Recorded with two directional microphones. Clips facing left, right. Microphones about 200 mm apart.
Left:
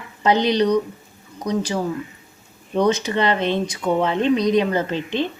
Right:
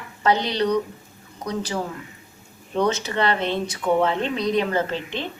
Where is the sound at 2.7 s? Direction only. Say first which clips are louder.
Left 3 dB; 15° left (ahead or behind).